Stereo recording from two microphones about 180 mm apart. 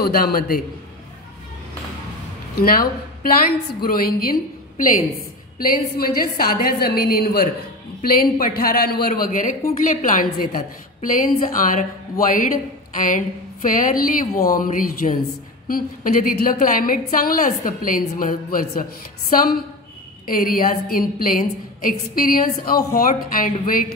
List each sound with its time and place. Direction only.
0.0 s a woman's voice: 55° left (ahead or behind)
2.5 s a woman's voice: 55° left (ahead or behind)
12.9 s a woman's voice: 45° left (ahead or behind)
14.2 s speech: 20° left (ahead or behind)
14.5 s a woman's voice: 50° left (ahead or behind)